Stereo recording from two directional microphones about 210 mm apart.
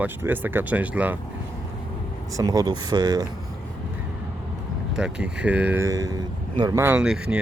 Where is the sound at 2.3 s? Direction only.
15° right (ahead or behind).